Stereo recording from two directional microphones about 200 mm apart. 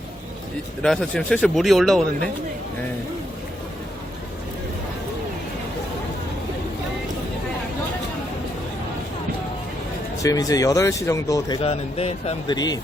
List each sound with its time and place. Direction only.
0.8 s speech: 5° left (ahead or behind)
10.2 s speech: 15° left (ahead or behind)